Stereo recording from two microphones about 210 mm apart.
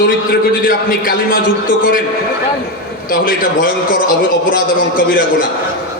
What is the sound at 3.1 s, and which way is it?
A man's voice, 40° left (ahead or behind).